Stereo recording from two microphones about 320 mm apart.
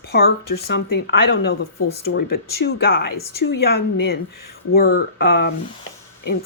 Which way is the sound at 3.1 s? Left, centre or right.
Left.